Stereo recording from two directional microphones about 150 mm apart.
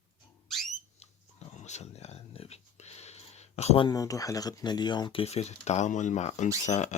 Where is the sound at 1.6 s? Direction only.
50° left (ahead or behind).